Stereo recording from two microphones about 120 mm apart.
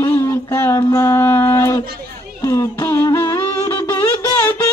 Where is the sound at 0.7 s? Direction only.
30° left (ahead or behind).